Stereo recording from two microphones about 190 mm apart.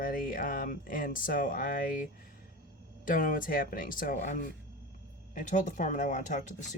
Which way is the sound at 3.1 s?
45° left (ahead or behind).